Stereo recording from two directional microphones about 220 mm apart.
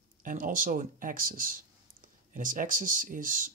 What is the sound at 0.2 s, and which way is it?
Speech, 40° right (ahead or behind).